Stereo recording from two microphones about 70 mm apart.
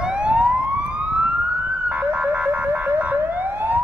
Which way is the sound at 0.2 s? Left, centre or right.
Centre.